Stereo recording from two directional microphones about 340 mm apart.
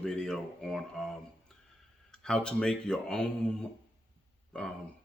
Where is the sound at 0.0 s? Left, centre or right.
Centre.